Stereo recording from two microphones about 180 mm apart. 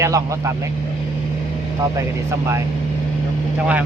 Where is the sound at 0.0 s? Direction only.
15° right (ahead or behind).